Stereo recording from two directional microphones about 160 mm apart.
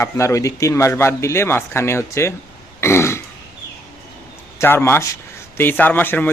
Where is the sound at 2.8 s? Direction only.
15° left (ahead or behind).